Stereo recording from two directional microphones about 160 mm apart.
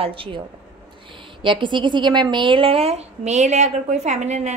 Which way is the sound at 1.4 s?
30° right (ahead or behind).